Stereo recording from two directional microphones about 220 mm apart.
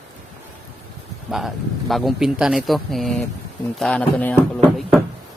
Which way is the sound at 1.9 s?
Centre (ahead or behind).